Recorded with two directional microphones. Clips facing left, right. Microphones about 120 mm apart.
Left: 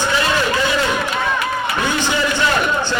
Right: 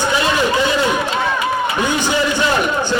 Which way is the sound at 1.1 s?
15° right (ahead or behind).